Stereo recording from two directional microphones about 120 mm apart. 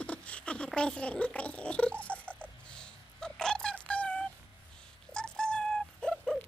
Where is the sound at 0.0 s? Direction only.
10° left (ahead or behind).